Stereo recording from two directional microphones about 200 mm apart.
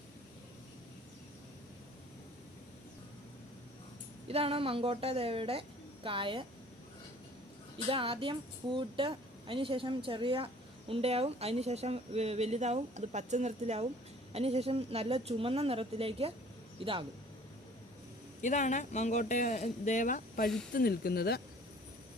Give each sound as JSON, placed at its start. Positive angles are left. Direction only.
{"t": 4.3, "sound": "a woman's voice", "side_deg": -30}
{"t": 7.9, "sound": "a woman's voice", "side_deg": -25}
{"t": 18.4, "sound": "speech", "side_deg": 35}